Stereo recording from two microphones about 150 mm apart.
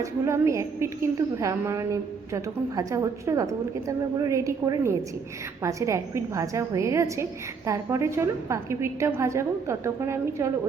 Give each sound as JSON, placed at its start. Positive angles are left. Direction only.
{"t": 0.0, "sound": "a woman's voice", "side_deg": -20}